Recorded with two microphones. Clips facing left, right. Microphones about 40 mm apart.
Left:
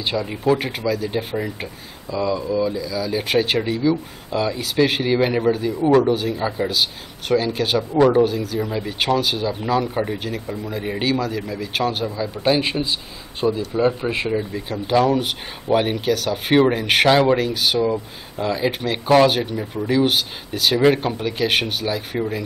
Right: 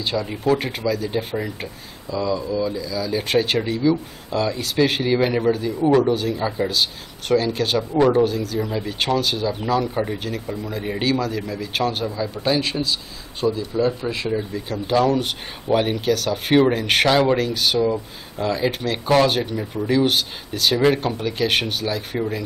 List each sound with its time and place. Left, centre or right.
0.0 s speech: centre
12.4 s speech: left
14.5 s speech: centre